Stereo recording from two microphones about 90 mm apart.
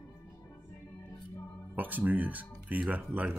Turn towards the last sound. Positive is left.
turn(degrees=-15)  # may be behind; listen again after turning